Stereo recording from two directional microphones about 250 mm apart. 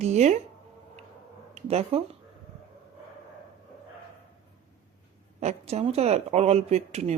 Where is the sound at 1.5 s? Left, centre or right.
Right.